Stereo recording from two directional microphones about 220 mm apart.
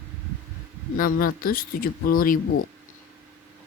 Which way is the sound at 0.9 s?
40° left (ahead or behind).